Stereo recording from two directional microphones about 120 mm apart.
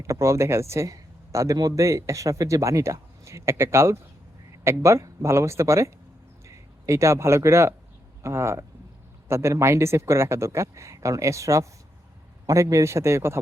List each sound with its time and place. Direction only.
0.0 s a man's voice: 25° right (ahead or behind)